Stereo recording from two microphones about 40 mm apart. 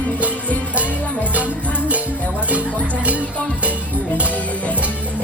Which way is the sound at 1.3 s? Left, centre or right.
Right.